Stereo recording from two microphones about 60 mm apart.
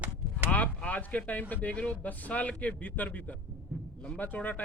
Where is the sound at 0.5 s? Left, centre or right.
Left.